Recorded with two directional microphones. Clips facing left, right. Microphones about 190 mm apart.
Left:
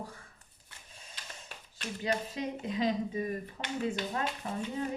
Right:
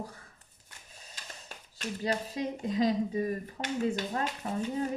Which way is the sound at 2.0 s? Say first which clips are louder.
Right 1 dB; 40° right (ahead or behind).